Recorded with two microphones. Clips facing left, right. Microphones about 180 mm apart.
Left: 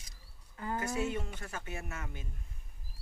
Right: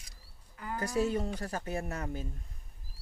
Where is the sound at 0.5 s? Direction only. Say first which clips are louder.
Left 2 dB; 25° left (ahead or behind).